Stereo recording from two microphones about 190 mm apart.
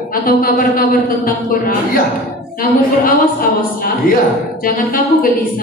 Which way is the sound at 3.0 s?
45° left (ahead or behind).